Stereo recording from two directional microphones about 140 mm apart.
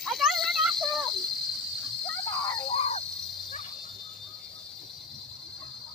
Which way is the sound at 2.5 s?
40° left (ahead or behind).